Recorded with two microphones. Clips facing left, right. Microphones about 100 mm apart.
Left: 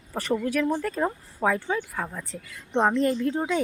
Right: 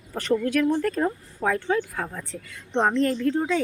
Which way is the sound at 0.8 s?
5° left (ahead or behind).